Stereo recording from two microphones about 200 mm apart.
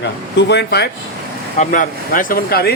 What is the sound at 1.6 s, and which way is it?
Speech, 40° left (ahead or behind).